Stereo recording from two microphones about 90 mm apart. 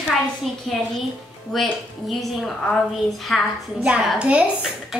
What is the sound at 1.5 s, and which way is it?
A woman's voice, 5° left (ahead or behind).